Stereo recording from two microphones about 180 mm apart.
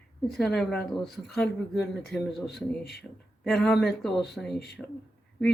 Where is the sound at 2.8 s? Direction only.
60° left (ahead or behind).